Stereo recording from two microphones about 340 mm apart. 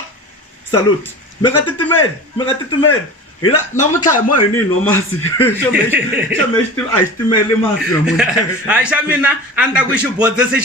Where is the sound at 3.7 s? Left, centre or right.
Left.